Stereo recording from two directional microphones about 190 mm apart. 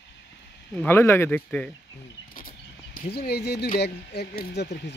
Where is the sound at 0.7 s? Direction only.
10° left (ahead or behind).